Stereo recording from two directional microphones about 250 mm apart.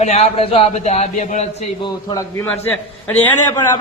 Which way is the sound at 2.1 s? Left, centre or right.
Centre.